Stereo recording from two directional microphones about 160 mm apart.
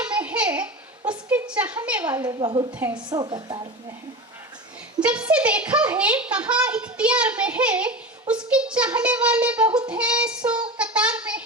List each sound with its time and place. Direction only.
0.1 s a sound: 10° right (ahead or behind)
2.2 s a woman's voice: 30° right (ahead or behind)
4.9 s a child's voice: 5° right (ahead or behind)
10.8 s child singing: 5° right (ahead or behind)